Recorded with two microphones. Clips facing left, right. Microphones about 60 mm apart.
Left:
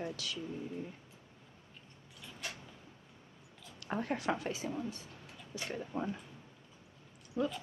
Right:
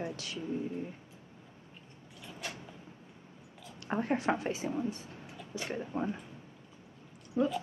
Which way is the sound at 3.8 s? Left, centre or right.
Right.